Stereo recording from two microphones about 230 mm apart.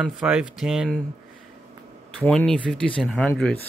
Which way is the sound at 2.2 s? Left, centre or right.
Centre.